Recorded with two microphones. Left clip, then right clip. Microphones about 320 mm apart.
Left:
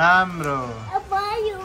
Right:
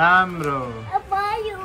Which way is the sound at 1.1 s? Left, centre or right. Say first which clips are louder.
Left 1 dB; centre.